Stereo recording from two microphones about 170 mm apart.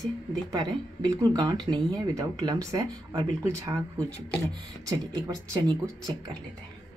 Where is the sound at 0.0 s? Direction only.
25° right (ahead or behind).